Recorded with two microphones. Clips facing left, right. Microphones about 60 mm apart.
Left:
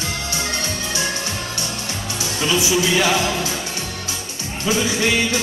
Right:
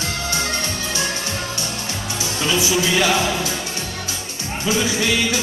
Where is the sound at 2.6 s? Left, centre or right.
Left.